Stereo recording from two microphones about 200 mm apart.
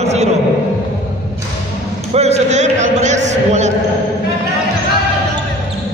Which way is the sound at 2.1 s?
35° right (ahead or behind).